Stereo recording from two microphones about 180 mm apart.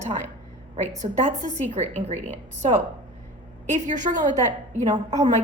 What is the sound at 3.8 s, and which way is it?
Speech, 45° right (ahead or behind).